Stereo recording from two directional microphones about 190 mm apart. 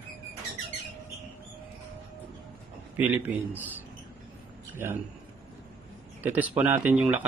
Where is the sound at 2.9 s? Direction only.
10° right (ahead or behind).